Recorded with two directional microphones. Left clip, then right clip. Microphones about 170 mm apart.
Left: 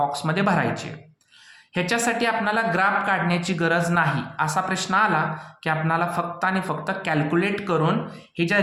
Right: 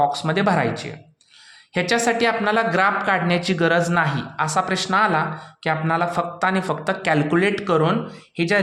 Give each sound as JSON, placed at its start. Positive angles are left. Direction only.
{"t": 0.0, "sound": "speech", "side_deg": -30}
{"t": 1.7, "sound": "speech", "side_deg": -35}